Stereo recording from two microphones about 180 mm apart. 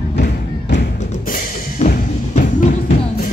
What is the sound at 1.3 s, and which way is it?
Music, 50° left (ahead or behind).